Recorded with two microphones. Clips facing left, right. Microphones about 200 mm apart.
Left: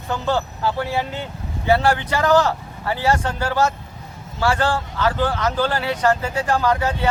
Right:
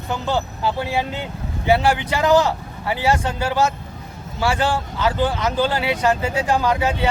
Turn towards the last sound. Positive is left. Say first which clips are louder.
# even
turn(degrees=-15)  # may be behind; listen again after turning